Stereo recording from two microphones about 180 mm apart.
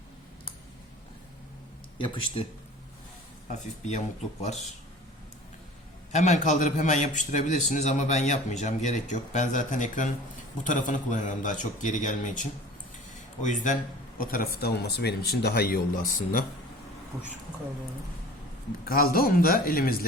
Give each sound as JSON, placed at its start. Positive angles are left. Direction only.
{"t": 2.0, "sound": "speech", "side_deg": 30}
{"t": 3.5, "sound": "speech", "side_deg": 40}
{"t": 6.1, "sound": "a man's voice", "side_deg": 40}
{"t": 14.2, "sound": "a man's voice", "side_deg": 55}
{"t": 14.6, "sound": "speech", "side_deg": 65}
{"t": 18.9, "sound": "speech", "side_deg": 55}